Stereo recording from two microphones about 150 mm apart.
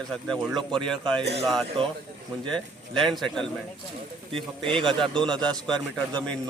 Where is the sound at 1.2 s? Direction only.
45° right (ahead or behind).